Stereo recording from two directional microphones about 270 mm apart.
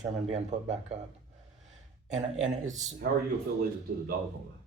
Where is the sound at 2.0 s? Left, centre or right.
Right.